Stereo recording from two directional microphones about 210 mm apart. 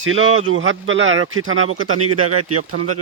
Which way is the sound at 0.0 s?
70° right (ahead or behind).